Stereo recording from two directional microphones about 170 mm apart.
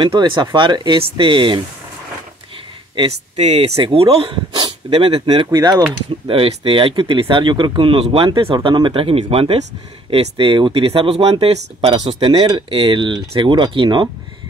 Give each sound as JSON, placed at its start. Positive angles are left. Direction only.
{"t": 0.0, "sound": "speech", "side_deg": -30}
{"t": 3.0, "sound": "speech", "side_deg": -40}
{"t": 6.2, "sound": "speech", "side_deg": -30}